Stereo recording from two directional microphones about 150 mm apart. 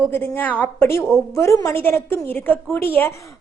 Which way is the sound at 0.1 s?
15° left (ahead or behind).